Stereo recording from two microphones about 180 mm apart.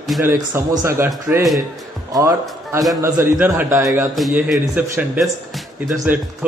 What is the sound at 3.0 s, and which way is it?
A man's voice, 15° right (ahead or behind).